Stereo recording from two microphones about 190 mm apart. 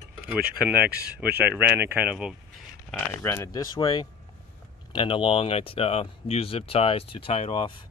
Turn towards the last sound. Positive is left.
turn(degrees=30)  # may be behind; listen again after turning